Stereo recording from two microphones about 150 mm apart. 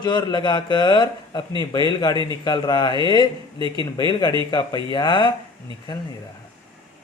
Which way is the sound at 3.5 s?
35° right (ahead or behind).